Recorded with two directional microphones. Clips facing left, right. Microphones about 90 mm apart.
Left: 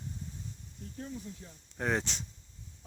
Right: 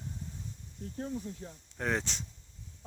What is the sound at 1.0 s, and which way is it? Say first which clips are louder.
Speech: right 5 dB; 45° right (ahead or behind).